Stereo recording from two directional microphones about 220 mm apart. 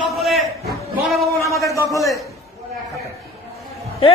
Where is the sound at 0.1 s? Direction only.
Centre (ahead or behind).